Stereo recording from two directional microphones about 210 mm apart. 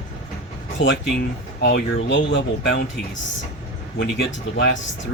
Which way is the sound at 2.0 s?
55° left (ahead or behind).